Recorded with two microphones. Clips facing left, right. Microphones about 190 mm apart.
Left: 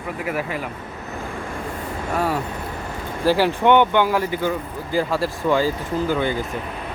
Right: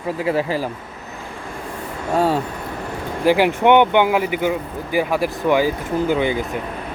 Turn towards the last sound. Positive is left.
turn(degrees=-15)  # may be behind; listen again after turning